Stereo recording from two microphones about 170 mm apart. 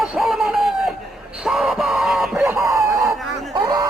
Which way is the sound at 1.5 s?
Centre (ahead or behind).